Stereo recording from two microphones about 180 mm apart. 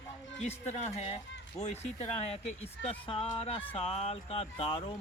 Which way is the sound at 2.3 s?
30° left (ahead or behind).